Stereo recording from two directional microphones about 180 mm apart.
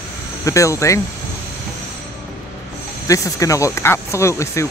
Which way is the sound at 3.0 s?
15° left (ahead or behind).